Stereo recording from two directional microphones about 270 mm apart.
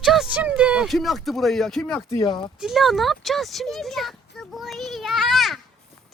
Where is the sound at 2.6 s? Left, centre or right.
Centre.